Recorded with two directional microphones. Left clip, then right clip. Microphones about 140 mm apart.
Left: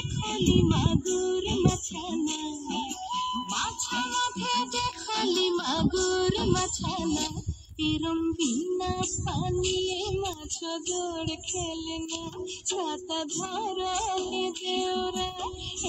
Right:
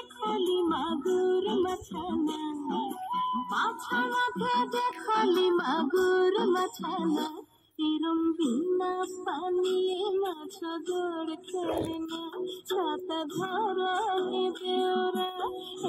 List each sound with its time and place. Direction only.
0.3 s child singing: 25° left (ahead or behind)
7.8 s music: 30° left (ahead or behind)
12.7 s music: 35° left (ahead or behind)